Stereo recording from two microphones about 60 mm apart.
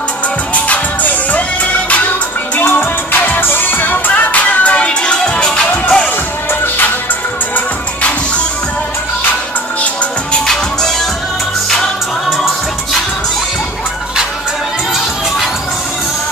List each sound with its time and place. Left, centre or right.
0.7 s music: left
2.6 s music: left; by 6.0 s centre
10.4 s music: centre